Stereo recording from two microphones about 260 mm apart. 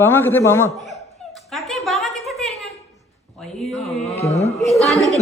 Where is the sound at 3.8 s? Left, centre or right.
Left.